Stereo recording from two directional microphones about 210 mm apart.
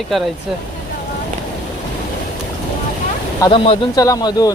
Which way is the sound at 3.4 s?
25° left (ahead or behind).